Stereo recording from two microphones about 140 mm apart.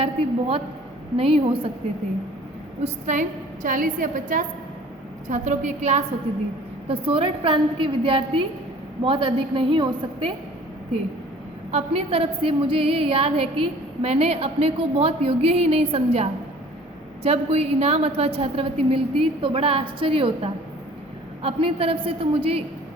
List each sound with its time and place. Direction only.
0.0 s a woman's voice: 40° right (ahead or behind)
2.8 s a woman's voice: 60° right (ahead or behind)
5.3 s a woman's voice: 60° right (ahead or behind)
6.8 s a woman's voice: 40° right (ahead or behind)
11.7 s a woman's voice: 45° right (ahead or behind)